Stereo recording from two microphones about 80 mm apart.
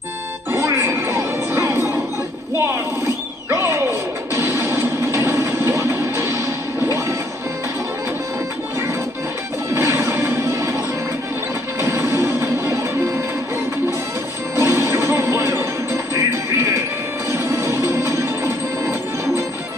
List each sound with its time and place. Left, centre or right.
0.6 s music: right
3.4 s a sound: right
4.6 s music: right
9.8 s music: right
11.8 s music: right
14.5 s music: right
16.2 s music: right
17.3 s music: right